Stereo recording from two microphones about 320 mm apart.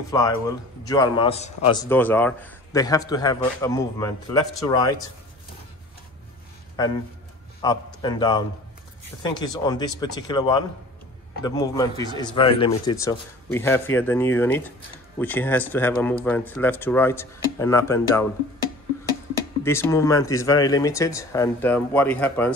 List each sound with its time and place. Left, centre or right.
0.1 s a man's voice: centre
7.6 s a man's voice: centre
19.6 s a man's voice: centre